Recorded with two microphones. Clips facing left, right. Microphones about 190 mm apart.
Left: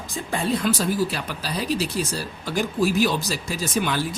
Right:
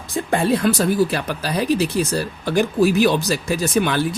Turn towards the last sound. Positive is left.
turn(degrees=-60)  # may be behind; listen again after turning